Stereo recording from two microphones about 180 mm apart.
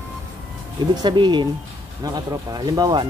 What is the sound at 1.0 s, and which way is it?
Speech, 25° right (ahead or behind).